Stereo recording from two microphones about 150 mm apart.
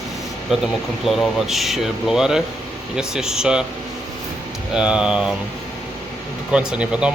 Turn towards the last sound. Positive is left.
turn(degrees=-10)  # may be behind; listen again after turning